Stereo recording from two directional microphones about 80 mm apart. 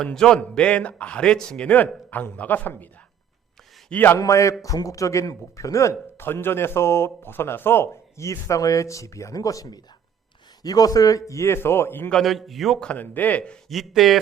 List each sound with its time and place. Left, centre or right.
0.0 s a man's voice: centre
2.0 s a man's voice: left
4.2 s speech: left
12.1 s a man's voice: centre
12.8 s a man's voice: centre
13.7 s a man's voice: centre